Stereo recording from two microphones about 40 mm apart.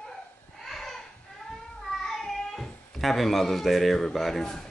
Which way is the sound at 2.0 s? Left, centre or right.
Centre.